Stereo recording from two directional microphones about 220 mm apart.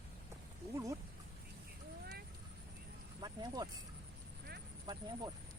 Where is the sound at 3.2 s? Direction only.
15° right (ahead or behind).